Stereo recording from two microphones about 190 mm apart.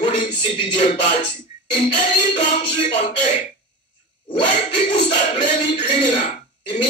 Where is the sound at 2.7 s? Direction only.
30° left (ahead or behind).